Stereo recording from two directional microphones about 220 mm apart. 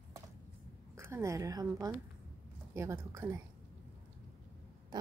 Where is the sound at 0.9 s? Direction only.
15° right (ahead or behind).